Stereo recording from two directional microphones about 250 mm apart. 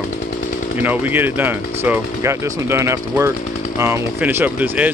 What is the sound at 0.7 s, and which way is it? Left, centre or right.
Speech, centre.